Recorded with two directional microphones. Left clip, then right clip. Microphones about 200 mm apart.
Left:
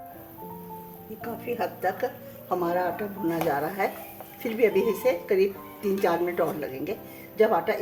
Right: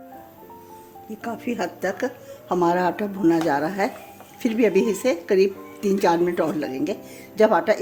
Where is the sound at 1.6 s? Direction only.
55° right (ahead or behind).